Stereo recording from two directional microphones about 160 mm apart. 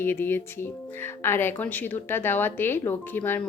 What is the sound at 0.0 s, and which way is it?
Speech, 15° left (ahead or behind).